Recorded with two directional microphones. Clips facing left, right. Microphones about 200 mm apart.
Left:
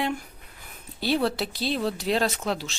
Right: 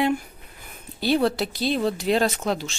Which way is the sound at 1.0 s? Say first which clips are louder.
Right 3 dB; centre (ahead or behind).